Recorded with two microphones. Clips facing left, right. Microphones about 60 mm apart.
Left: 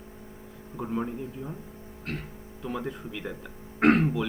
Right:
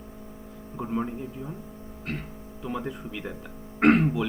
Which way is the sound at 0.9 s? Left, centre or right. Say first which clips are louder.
Right 2 dB; centre.